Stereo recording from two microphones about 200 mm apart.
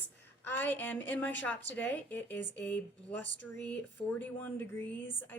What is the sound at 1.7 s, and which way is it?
Speech, 10° left (ahead or behind).